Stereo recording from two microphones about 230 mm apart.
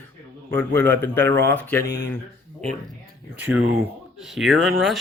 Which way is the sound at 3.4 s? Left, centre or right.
Centre.